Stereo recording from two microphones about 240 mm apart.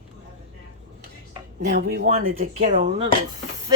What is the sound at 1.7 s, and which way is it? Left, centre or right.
Speech, right.